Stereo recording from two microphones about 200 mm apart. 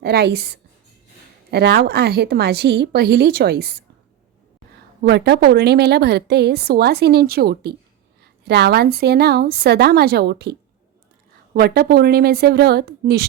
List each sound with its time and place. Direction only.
0.0 s a woman's voice: 55° right (ahead or behind)
5.0 s a woman's voice: 55° right (ahead or behind)
11.5 s a woman's voice: 50° right (ahead or behind)